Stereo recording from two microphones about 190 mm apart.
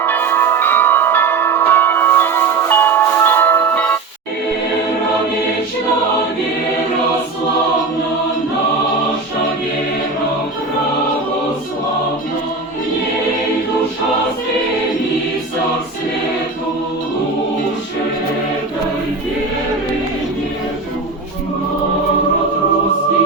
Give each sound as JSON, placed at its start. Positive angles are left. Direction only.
{"t": 0.0, "sound": "bell", "side_deg": 10}